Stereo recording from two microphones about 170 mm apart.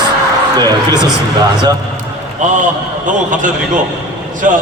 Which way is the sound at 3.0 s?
50° right (ahead or behind).